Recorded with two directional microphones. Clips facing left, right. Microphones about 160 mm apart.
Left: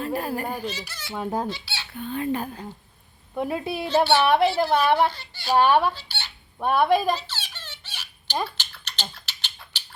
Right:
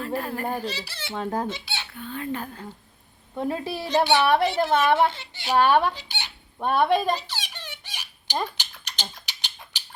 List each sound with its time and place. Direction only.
0.0 s speech: 20° left (ahead or behind)
0.6 s speech: 35° right (ahead or behind)
1.1 s a woman's voice: 10° left (ahead or behind)
1.5 s squeak: 20° right (ahead or behind)
1.9 s a woman's voice: 20° left (ahead or behind)
3.8 s a child's voice: 15° right (ahead or behind)
5.5 s a woman's voice: 15° left (ahead or behind)
5.9 s fowl: 15° right (ahead or behind)
6.6 s a woman's voice: 10° left (ahead or behind)
7.2 s a sound: 15° right (ahead or behind)